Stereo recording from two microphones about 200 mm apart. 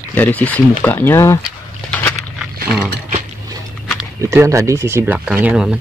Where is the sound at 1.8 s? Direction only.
5° left (ahead or behind).